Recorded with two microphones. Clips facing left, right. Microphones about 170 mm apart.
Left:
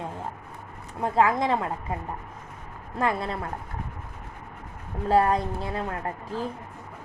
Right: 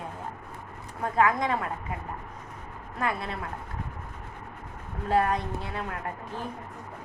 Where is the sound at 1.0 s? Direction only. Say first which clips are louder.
Left 2 dB; 25° left (ahead or behind).